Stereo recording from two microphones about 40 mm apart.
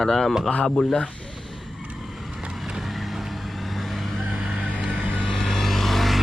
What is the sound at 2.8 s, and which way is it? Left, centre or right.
Vehicle, centre.